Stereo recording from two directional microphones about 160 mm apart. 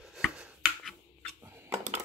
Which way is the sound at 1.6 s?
45° right (ahead or behind).